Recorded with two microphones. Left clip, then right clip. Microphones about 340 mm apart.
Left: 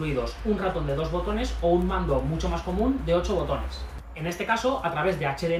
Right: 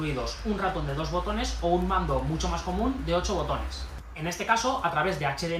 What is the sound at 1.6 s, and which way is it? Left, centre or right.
Speech, centre.